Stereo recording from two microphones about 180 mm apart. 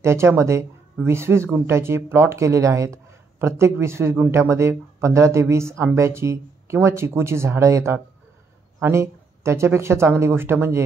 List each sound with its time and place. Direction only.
0.0 s speech: 15° right (ahead or behind)